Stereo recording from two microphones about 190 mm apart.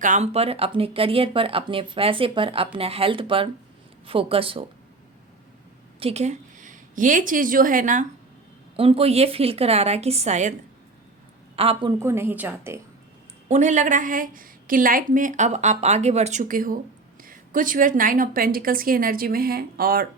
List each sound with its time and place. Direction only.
0.0 s speech: 40° right (ahead or behind)
6.0 s a woman's voice: 30° right (ahead or behind)
8.7 s a woman's voice: 30° right (ahead or behind)
11.5 s speech: 30° right (ahead or behind)
12.0 s a woman's voice: 10° right (ahead or behind)
13.5 s a woman's voice: 40° right (ahead or behind)